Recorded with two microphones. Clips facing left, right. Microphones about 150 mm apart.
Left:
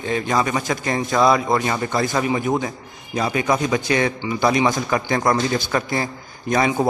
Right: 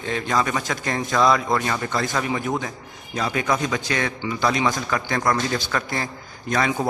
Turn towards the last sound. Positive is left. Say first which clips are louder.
# left 4 dB
turn(degrees=15)  # may be behind; listen again after turning